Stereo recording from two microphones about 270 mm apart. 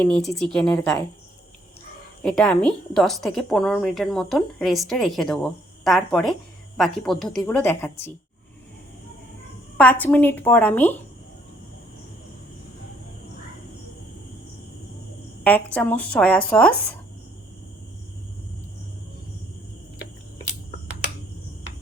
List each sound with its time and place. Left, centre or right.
0.0 s a woman's voice: centre
2.2 s a woman's voice: centre
9.7 s a woman's voice: centre
15.4 s a woman's voice: centre